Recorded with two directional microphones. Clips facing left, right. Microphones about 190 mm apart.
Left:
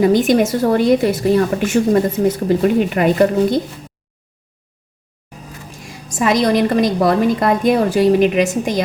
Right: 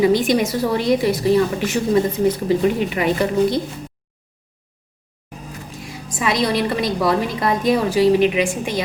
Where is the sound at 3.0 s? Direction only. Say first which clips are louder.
Left 4 dB; 55° left (ahead or behind).